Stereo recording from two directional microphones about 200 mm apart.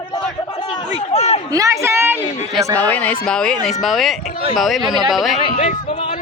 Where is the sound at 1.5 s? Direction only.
15° right (ahead or behind).